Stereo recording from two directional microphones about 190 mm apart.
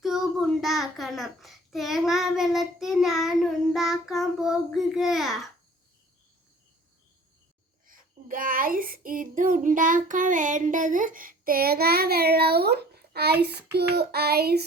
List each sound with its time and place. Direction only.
0.0 s a child's voice: centre (ahead or behind)
7.9 s child singing: 45° right (ahead or behind)